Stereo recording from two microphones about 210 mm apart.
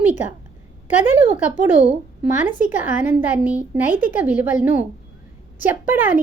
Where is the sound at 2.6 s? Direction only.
10° right (ahead or behind).